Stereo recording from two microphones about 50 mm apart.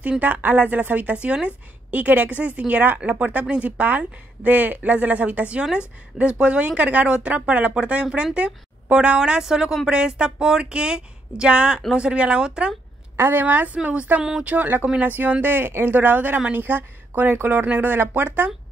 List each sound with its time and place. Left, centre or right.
0.2 s a woman's voice: right
9.4 s speech: centre
13.1 s a woman's voice: right